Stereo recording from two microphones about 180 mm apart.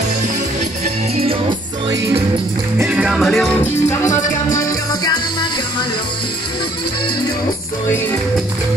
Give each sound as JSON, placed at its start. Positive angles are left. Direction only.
{"t": 2.8, "sound": "music", "side_deg": -5}
{"t": 4.6, "sound": "music", "side_deg": 20}